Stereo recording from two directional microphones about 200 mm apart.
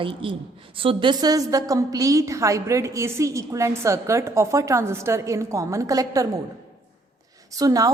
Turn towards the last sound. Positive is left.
turn(degrees=-15)  # may be behind; listen again after turning